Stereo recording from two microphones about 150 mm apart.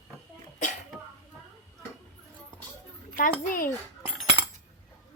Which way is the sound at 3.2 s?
70° left (ahead or behind).